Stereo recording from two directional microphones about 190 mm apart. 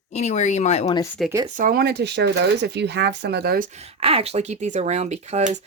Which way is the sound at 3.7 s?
35° right (ahead or behind).